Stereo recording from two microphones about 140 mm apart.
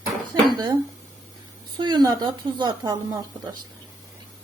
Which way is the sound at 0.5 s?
30° right (ahead or behind).